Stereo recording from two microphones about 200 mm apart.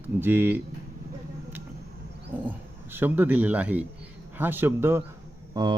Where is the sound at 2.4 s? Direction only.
10° right (ahead or behind).